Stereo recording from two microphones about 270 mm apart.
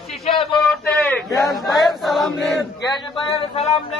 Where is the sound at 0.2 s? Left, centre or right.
Centre.